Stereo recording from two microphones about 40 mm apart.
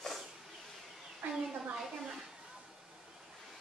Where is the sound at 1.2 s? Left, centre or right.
Right.